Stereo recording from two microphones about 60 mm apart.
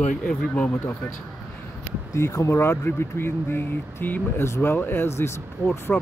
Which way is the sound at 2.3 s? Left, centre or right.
Left.